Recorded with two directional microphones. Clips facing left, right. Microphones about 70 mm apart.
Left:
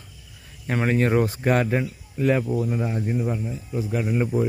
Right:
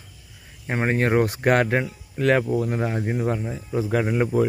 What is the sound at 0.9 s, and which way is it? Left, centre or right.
Speech, right.